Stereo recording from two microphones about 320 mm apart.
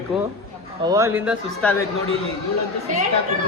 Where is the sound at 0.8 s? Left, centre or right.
Centre.